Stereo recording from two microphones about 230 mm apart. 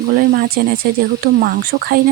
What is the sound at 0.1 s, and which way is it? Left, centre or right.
Speech, right.